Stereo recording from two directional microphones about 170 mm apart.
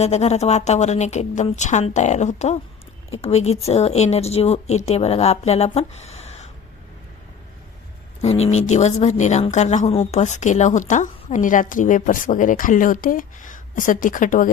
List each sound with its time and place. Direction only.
0.0 s speech: 40° left (ahead or behind)
8.2 s speech: 40° left (ahead or behind)